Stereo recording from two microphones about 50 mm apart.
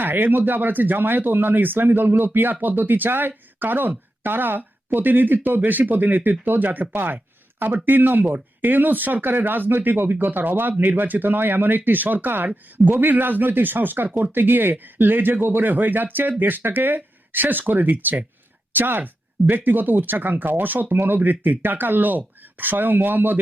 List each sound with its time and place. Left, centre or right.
0.0 s speech: right